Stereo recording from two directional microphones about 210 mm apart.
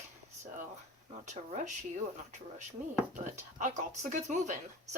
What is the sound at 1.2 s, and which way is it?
Speech, 35° right (ahead or behind).